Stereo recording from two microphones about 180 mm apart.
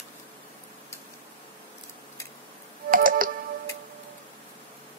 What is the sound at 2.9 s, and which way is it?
Music, 50° right (ahead or behind).